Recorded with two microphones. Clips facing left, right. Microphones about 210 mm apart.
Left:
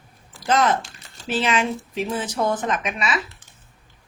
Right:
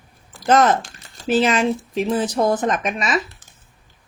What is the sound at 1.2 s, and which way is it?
Speech, 45° right (ahead or behind).